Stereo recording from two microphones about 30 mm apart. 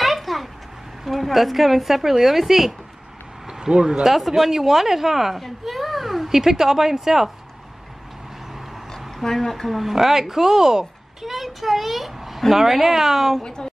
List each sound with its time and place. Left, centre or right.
0.0 s a sound: centre
1.0 s speech: centre
3.4 s speech: right
4.4 s a child's voice: centre
8.9 s a sound: centre
9.7 s a child's voice: centre
11.3 s a child's voice: centre
13.4 s speech: left